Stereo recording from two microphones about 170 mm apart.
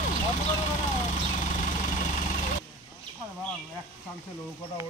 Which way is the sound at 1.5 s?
50° left (ahead or behind).